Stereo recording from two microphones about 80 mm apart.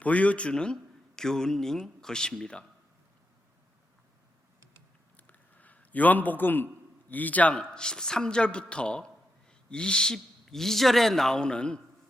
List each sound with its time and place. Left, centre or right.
0.0 s speech: centre
5.1 s a sound: centre
7.1 s speech: left